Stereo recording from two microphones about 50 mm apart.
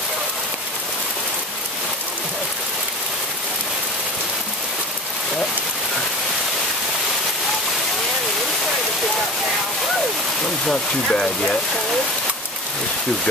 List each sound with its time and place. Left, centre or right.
10.7 s speech: centre